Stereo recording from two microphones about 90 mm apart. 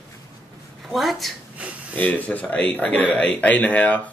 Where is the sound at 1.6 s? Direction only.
15° right (ahead or behind).